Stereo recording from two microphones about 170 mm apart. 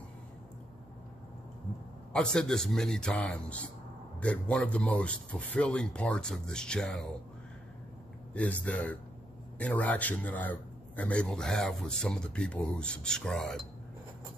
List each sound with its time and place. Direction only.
2.1 s a man's voice: 5° left (ahead or behind)
8.3 s a man's voice: 10° left (ahead or behind)